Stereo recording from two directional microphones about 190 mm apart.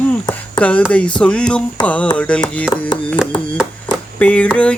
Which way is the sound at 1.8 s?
5° left (ahead or behind).